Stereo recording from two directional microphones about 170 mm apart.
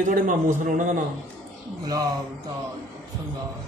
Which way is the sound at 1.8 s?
20° right (ahead or behind).